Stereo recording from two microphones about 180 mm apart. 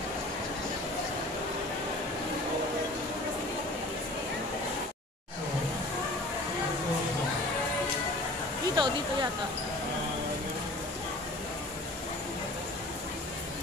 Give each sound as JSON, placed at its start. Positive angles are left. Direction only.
{"t": 8.7, "sound": "speech", "side_deg": -25}